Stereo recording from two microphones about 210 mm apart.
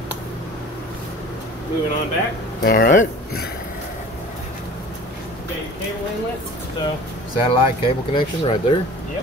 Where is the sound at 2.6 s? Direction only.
45° left (ahead or behind).